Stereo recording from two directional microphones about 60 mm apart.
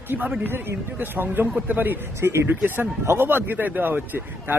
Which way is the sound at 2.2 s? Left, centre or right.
Right.